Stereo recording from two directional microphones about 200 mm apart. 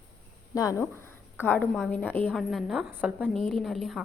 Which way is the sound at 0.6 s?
15° left (ahead or behind).